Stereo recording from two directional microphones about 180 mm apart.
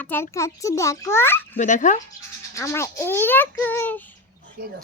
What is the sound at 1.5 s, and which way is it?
Speech, 45° left (ahead or behind).